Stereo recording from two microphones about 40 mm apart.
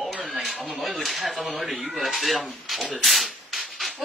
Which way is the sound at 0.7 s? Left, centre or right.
Centre.